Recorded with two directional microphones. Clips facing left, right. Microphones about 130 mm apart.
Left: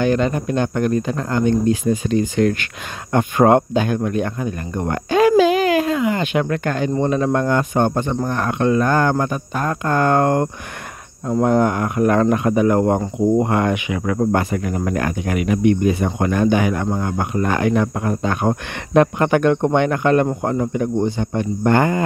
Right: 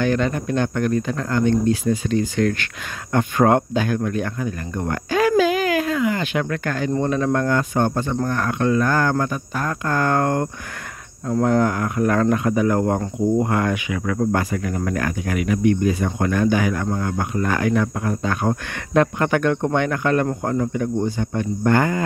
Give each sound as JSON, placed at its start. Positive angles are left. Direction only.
{"t": 0.0, "sound": "speech", "side_deg": 20}